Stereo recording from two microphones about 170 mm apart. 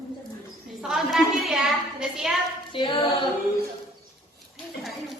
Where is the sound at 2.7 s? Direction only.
30° left (ahead or behind).